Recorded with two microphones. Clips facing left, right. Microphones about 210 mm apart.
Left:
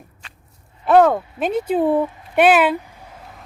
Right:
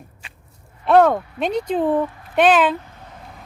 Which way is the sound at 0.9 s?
5° left (ahead or behind).